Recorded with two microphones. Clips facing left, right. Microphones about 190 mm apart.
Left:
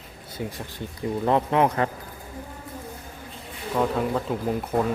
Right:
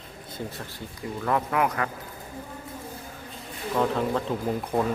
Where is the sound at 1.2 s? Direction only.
25° left (ahead or behind).